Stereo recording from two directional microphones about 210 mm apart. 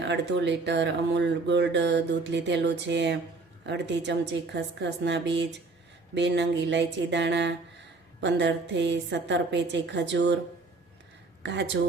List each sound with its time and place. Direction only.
0.0 s speech: 55° right (ahead or behind)
11.4 s speech: 55° right (ahead or behind)